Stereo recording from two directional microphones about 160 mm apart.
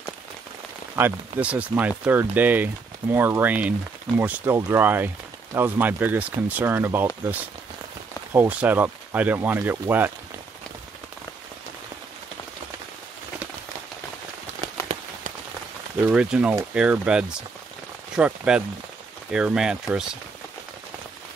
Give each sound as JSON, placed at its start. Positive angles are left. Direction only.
{"t": 0.9, "sound": "speech", "side_deg": -10}
{"t": 16.1, "sound": "speech", "side_deg": -5}